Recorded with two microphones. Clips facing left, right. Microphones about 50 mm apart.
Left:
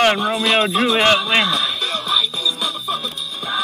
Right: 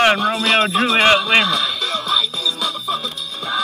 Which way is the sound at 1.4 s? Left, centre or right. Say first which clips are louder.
Even; left.